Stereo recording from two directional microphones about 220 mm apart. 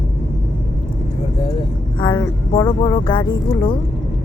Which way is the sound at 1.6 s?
20° left (ahead or behind).